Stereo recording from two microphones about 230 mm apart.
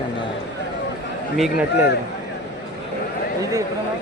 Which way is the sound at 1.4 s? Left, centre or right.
Centre.